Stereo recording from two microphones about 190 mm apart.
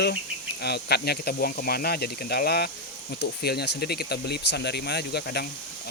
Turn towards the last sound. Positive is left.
turn(degrees=60)  # may be behind; listen again after turning